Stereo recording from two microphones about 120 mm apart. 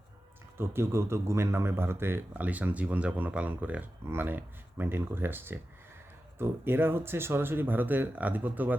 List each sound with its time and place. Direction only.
0.5 s speech: 20° right (ahead or behind)